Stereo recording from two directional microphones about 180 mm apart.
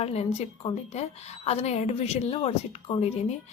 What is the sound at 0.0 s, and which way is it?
A woman's voice, 35° left (ahead or behind).